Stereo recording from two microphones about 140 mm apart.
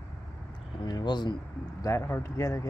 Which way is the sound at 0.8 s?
30° left (ahead or behind).